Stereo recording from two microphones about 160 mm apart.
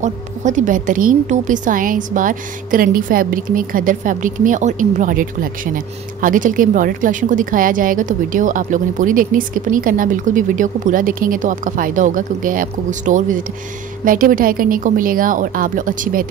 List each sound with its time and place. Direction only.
0.0 s a woman's voice: 50° right (ahead or behind)